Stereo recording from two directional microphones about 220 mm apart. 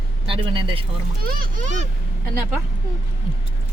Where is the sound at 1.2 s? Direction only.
40° right (ahead or behind).